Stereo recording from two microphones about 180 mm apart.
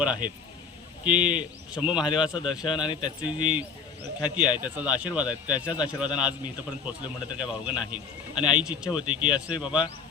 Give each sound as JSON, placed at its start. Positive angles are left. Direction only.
{"t": 0.0, "sound": "a man's voice", "side_deg": -5}
{"t": 2.0, "sound": "speech", "side_deg": 25}
{"t": 3.3, "sound": "a man's voice", "side_deg": -5}
{"t": 8.4, "sound": "speech", "side_deg": 25}
{"t": 8.6, "sound": "speech", "side_deg": -5}
{"t": 8.9, "sound": "speech", "side_deg": 25}
{"t": 9.6, "sound": "a man's voice", "side_deg": -5}